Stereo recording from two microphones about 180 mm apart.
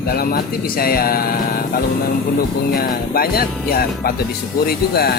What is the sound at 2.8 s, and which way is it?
Speech, 55° left (ahead or behind).